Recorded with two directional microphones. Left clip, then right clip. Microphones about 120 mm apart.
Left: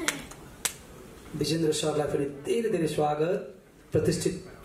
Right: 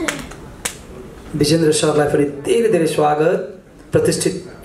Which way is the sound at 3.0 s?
40° right (ahead or behind).